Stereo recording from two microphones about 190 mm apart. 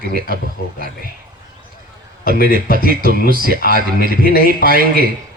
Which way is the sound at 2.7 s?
50° right (ahead or behind).